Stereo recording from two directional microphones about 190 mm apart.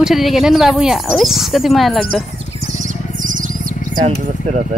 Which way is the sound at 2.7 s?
45° right (ahead or behind).